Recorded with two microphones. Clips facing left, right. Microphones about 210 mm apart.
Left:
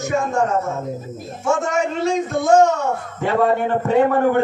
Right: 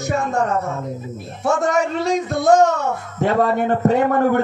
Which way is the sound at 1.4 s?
35° right (ahead or behind).